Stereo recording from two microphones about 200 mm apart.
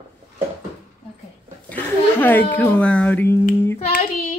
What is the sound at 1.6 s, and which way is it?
Speech, 10° left (ahead or behind).